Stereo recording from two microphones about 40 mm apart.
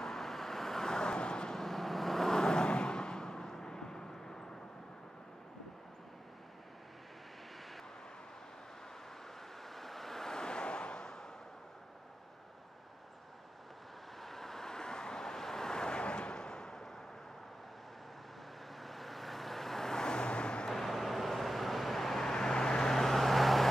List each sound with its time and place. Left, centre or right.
0.0 s vehicle: centre
1.6 s vehicle: centre
9.6 s vehicle: centre
14.2 s vehicle: centre
18.8 s vehicle: centre; by 20.6 s left
20.7 s vehicle: centre
22.3 s vehicle: centre